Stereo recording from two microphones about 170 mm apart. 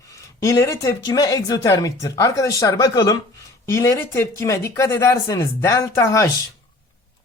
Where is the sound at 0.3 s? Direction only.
15° left (ahead or behind).